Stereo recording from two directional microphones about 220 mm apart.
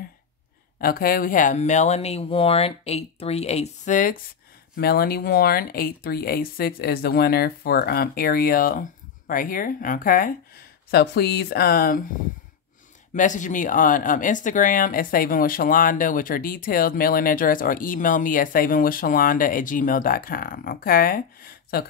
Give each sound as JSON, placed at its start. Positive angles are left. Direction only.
{"t": 0.7, "sound": "speech", "side_deg": 40}
{"t": 13.1, "sound": "speech", "side_deg": 35}